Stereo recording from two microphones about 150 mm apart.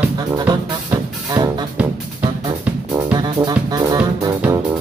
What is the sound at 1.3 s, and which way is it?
Music, 30° right (ahead or behind).